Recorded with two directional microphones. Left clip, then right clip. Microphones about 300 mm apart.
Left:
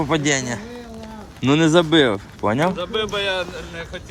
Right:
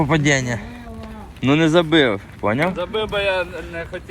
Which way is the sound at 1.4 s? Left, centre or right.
Centre.